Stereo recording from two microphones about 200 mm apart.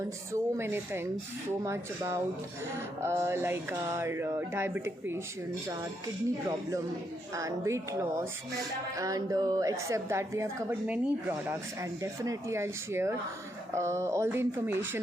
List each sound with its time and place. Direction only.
0.0 s a woman's voice: 15° right (ahead or behind)
7.3 s a woman's voice: 15° right (ahead or behind)